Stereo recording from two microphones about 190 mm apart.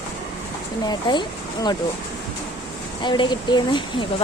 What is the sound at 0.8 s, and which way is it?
Speech, 25° left (ahead or behind).